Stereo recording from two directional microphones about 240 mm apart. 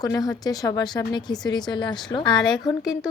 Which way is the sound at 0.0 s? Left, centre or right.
Centre.